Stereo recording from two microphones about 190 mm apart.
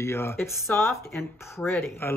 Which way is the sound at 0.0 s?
15° left (ahead or behind).